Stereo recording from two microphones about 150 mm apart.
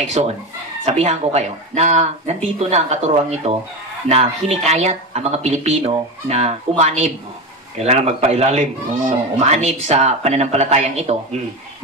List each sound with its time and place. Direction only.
0.0 s speech: 50° right (ahead or behind)